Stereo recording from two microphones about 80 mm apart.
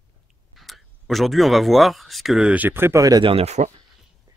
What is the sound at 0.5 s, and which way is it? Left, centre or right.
Speech, centre.